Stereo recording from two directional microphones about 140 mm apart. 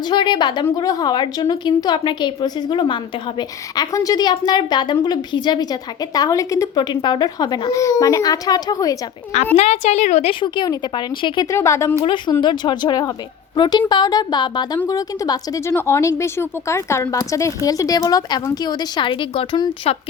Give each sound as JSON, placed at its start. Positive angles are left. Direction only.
{"t": 0.0, "sound": "a woman's voice", "side_deg": 30}
{"t": 9.6, "sound": "a woman's voice", "side_deg": 55}
{"t": 10.4, "sound": "speech", "side_deg": 30}
{"t": 11.4, "sound": "a woman's voice", "side_deg": 20}
{"t": 12.0, "sound": "a woman's voice", "side_deg": 35}